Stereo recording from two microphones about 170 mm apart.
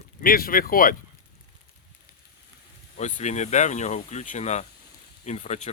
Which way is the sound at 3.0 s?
45° left (ahead or behind).